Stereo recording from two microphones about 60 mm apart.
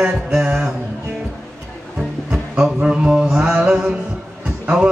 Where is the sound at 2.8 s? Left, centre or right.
Centre.